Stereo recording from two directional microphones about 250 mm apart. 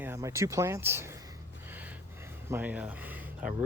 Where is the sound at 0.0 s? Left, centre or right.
Centre.